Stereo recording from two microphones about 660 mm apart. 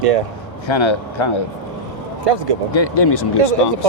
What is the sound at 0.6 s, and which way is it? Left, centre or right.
Speech, left.